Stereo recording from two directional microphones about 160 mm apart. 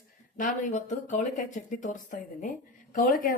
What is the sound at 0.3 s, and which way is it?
Speech, 50° left (ahead or behind).